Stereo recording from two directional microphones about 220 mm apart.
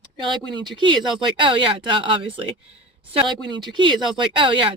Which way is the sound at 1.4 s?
20° right (ahead or behind).